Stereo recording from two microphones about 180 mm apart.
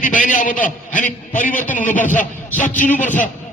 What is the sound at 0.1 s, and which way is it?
A man's voice, 45° left (ahead or behind).